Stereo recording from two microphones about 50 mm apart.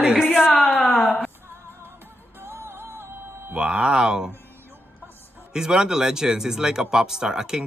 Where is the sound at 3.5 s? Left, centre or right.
Centre.